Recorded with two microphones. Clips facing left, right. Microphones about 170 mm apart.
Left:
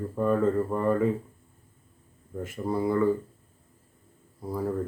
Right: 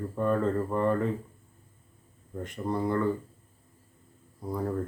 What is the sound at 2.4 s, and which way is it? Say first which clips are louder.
Speech: left 2 dB; 5° left (ahead or behind).